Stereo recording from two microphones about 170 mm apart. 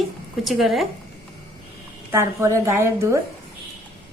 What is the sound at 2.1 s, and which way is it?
A woman's voice, 15° right (ahead or behind).